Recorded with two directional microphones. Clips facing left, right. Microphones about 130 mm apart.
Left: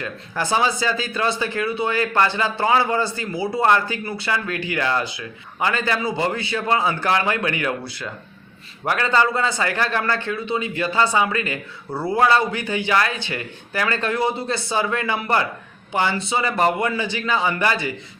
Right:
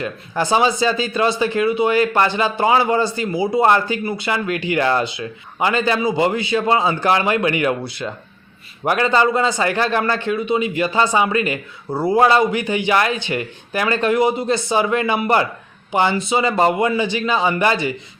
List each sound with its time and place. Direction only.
0.0 s speech: 20° right (ahead or behind)